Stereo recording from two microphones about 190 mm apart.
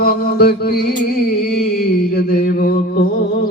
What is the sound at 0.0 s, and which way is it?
Mantra, 50° left (ahead or behind).